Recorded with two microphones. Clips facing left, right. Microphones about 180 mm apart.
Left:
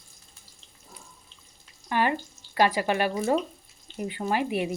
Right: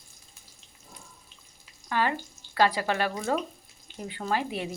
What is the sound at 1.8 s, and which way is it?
Speech, 15° left (ahead or behind).